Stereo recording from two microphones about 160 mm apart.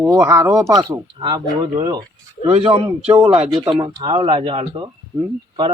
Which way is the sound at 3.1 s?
20° right (ahead or behind).